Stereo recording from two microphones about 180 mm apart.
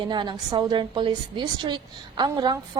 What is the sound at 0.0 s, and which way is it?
A woman's voice, 25° right (ahead or behind).